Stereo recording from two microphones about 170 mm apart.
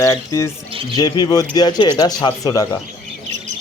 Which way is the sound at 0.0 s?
20° left (ahead or behind).